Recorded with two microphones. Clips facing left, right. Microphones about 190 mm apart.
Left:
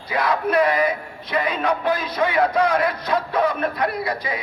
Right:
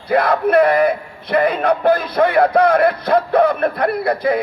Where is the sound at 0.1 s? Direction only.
55° right (ahead or behind).